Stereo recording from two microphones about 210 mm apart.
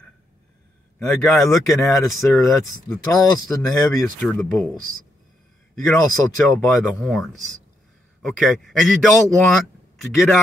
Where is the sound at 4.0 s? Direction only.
5° left (ahead or behind).